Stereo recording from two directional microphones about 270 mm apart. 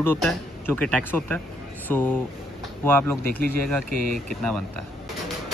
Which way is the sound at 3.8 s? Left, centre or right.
Right.